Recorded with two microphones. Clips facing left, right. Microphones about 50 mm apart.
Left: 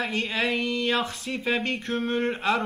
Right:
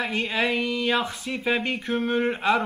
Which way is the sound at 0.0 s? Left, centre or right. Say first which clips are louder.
Right 2 dB; centre.